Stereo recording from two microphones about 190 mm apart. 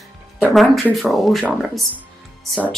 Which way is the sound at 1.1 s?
Centre (ahead or behind).